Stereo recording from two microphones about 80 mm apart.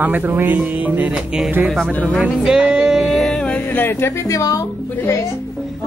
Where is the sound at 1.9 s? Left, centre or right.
Centre.